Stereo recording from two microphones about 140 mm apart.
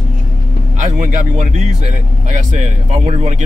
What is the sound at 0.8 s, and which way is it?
Speech, 60° right (ahead or behind).